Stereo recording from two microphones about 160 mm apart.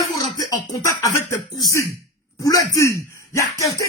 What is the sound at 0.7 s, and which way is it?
A man's voice, 20° left (ahead or behind).